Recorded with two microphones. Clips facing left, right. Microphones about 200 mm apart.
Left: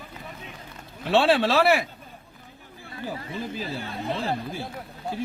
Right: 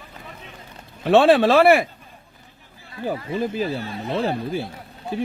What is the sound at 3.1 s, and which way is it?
Speech, 55° right (ahead or behind).